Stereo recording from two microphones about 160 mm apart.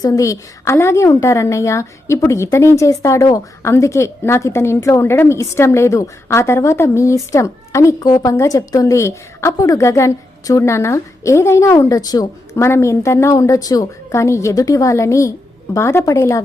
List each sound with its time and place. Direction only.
0.0 s a woman's voice: 20° left (ahead or behind)